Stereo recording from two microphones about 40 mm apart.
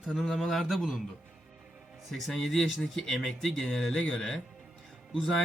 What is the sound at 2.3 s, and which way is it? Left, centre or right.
A man's voice, centre.